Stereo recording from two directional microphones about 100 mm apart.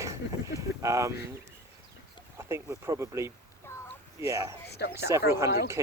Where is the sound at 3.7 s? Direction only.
25° left (ahead or behind).